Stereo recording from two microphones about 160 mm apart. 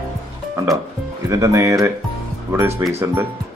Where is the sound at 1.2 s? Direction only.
20° right (ahead or behind).